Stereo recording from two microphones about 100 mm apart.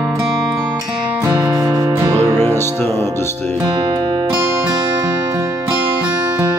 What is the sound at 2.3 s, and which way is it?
Music, 25° left (ahead or behind).